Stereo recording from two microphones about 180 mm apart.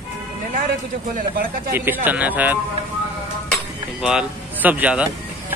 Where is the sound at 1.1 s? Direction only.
55° right (ahead or behind).